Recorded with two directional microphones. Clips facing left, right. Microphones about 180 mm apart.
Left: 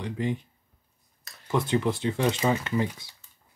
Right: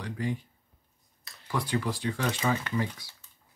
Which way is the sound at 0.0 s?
20° left (ahead or behind).